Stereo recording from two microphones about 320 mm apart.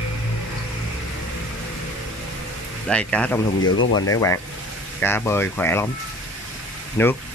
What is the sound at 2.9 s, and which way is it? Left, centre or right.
Speech, centre.